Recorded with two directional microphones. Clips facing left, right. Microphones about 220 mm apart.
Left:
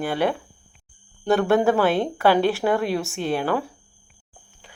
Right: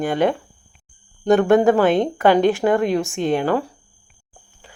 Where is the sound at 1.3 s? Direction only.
15° right (ahead or behind).